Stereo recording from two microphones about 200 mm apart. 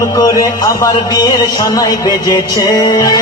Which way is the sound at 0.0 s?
15° left (ahead or behind).